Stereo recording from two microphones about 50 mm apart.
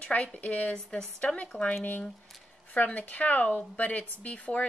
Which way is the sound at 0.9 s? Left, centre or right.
Centre.